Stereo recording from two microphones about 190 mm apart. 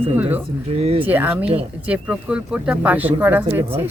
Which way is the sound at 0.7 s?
30° right (ahead or behind).